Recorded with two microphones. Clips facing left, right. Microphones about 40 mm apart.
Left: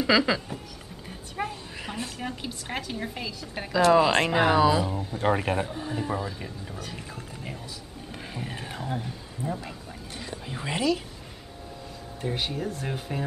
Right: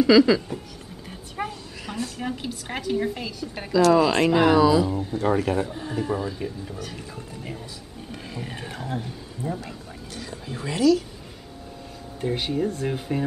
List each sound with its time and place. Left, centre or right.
0.0 s speech: centre
1.5 s a sound: left
2.1 s a woman's voice: centre
3.7 s speech: left
5.2 s speech: left
5.7 s a woman's voice: centre
8.4 s a woman's voice: centre
9.6 s a sound: centre
10.7 s speech: left
12.2 s a woman's voice: centre